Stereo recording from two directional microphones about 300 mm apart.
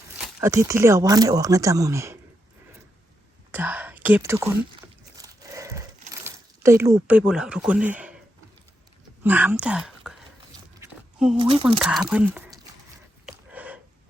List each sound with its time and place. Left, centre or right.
0.3 s speech: centre
3.5 s speech: centre
5.1 s a sound: centre
6.2 s speech: centre
9.2 s speech: centre
10.8 s a sound: centre
11.3 s speech: centre
11.8 s speech: centre
13.2 s a sound: centre